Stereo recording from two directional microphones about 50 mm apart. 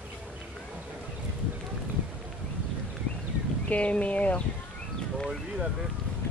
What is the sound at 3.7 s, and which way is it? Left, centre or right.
Speech, left.